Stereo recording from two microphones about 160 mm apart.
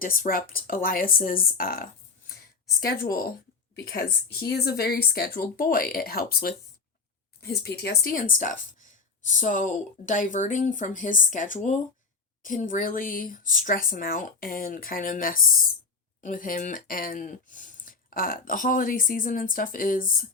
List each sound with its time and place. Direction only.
0.0 s a woman's voice: 60° left (ahead or behind)